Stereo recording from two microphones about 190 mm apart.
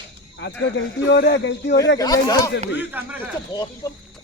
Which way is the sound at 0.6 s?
65° left (ahead or behind).